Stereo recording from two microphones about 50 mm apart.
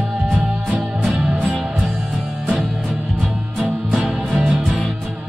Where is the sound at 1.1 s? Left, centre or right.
Right.